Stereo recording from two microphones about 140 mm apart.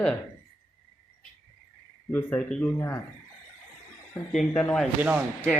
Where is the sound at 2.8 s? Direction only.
20° left (ahead or behind).